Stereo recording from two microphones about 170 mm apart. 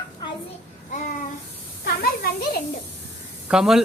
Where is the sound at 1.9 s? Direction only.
60° left (ahead or behind).